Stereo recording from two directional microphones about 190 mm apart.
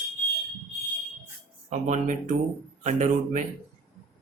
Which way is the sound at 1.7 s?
40° right (ahead or behind).